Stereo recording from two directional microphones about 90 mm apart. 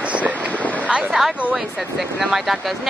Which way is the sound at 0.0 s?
15° right (ahead or behind).